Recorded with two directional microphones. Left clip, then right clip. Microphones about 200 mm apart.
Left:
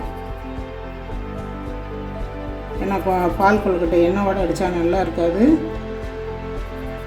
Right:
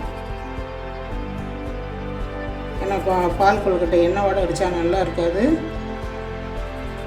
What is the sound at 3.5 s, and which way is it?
A woman's voice, 35° left (ahead or behind).